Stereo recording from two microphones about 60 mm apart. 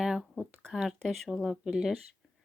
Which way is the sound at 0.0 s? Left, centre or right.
Centre.